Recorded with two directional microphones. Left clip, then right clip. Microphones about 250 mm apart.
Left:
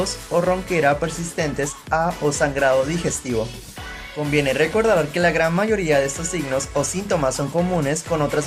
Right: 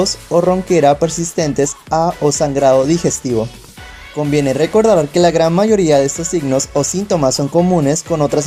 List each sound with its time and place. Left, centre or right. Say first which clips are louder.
0.0 s speech: right 7 dB; centre